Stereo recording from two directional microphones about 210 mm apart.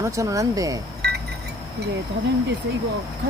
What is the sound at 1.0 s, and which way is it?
Wind chime, 50° right (ahead or behind).